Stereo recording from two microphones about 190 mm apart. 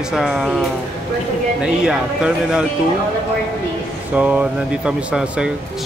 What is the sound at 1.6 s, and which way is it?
Speech, 5° right (ahead or behind).